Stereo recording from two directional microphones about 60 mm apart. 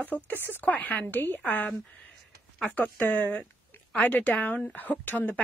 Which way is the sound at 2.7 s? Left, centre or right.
Left.